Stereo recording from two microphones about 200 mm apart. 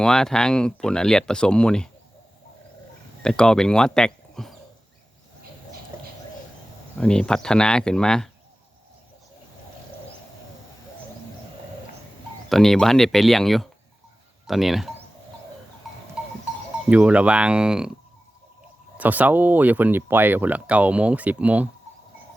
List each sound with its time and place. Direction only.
0.0 s speech: 5° left (ahead or behind)
3.2 s speech: 5° left (ahead or behind)
7.0 s speech: 5° left (ahead or behind)
12.5 s speech: centre (ahead or behind)
16.9 s speech: 5° right (ahead or behind)
18.9 s speech: 10° right (ahead or behind)